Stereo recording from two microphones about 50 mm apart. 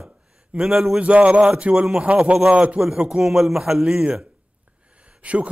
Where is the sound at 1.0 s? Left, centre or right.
Right.